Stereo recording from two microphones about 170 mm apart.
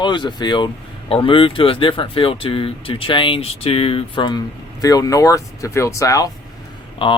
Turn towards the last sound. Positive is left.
turn(degrees=30)  # may be behind; listen again after turning